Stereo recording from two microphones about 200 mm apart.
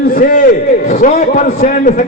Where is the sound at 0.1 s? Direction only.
45° left (ahead or behind).